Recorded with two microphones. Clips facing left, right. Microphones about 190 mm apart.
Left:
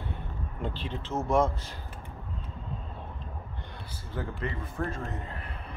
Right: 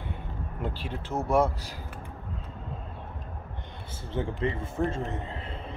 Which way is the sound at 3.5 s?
20° right (ahead or behind).